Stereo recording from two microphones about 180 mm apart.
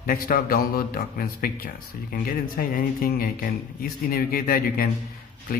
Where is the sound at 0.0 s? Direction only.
55° left (ahead or behind).